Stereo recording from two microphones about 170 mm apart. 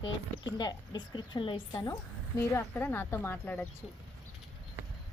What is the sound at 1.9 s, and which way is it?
A woman's voice, 15° left (ahead or behind).